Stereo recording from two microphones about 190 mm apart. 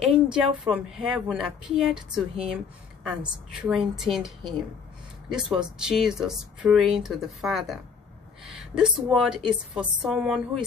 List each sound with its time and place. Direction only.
0.0 s a sound: 5° right (ahead or behind)
0.7 s speech: 5° right (ahead or behind)
2.0 s speech: 30° right (ahead or behind)
3.0 s speech: 5° right (ahead or behind)
5.3 s speech: 5° right (ahead or behind)